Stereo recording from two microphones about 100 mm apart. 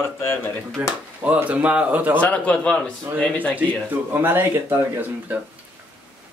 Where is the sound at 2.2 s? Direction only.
15° left (ahead or behind).